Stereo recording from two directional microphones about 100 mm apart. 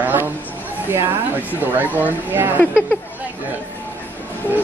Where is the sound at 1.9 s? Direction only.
20° right (ahead or behind).